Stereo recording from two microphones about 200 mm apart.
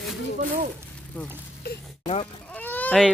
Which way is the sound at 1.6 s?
50° left (ahead or behind).